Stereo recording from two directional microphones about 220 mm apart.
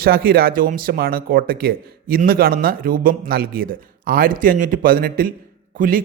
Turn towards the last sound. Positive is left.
turn(degrees=-40)  # may be behind; listen again after turning